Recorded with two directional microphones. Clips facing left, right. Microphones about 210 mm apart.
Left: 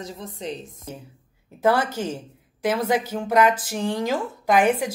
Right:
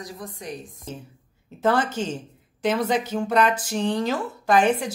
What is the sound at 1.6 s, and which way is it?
Speech, 10° left (ahead or behind).